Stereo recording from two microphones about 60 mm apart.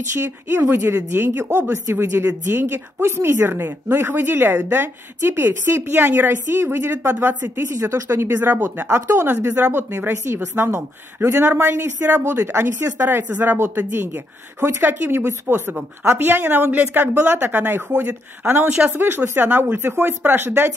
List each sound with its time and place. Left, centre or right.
0.1 s a woman's voice: right
7.7 s speech: right
8.4 s speech: right
8.9 s a woman's voice: right
12.3 s a woman's voice: right
12.9 s speech: right
14.9 s speech: right